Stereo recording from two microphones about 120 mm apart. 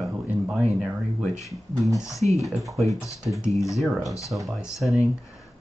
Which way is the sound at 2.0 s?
25° left (ahead or behind).